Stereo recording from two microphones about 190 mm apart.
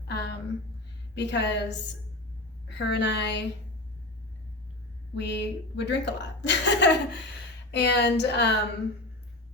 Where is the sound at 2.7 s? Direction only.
65° left (ahead or behind).